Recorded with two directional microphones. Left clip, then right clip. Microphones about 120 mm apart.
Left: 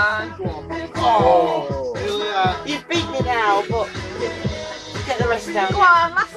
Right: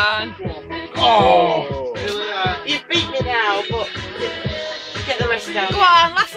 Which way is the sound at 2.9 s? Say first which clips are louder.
Even; 40° left (ahead or behind).